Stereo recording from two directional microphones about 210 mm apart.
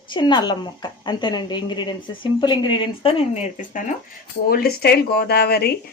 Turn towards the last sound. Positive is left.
turn(degrees=50)  # may be behind; listen again after turning